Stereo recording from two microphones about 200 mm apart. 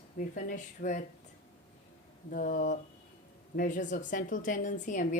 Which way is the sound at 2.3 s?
45° left (ahead or behind).